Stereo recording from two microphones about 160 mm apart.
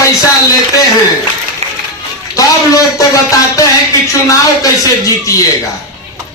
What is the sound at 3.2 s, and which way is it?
Speech, 20° left (ahead or behind).